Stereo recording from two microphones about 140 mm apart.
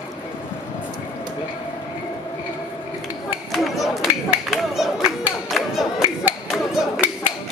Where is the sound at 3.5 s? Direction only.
Centre (ahead or behind).